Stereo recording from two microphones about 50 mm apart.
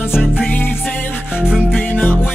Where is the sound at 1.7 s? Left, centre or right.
Left.